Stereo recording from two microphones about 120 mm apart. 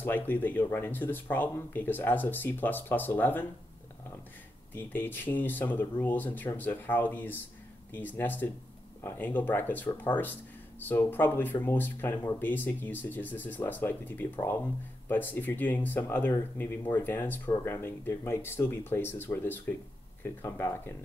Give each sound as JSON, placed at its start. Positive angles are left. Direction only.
{"t": 0.0, "sound": "speech", "side_deg": 15}
{"t": 4.7, "sound": "speech", "side_deg": 15}